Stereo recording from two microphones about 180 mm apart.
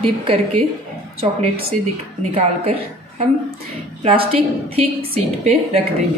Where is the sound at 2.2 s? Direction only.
35° right (ahead or behind).